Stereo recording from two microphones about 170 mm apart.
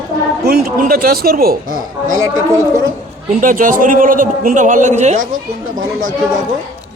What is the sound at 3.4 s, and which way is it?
A man's voice, 50° right (ahead or behind).